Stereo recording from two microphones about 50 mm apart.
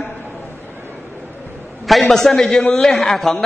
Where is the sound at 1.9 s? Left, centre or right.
Centre.